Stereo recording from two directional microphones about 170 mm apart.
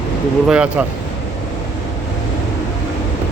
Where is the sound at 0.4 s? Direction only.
5° right (ahead or behind).